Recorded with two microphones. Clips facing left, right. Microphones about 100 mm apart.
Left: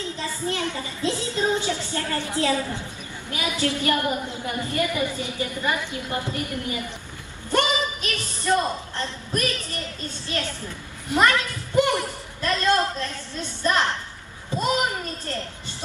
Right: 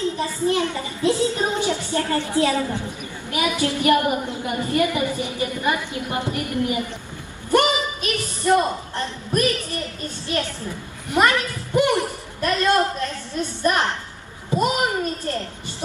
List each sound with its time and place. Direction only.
0.0 s a child's voice: 15° right (ahead or behind)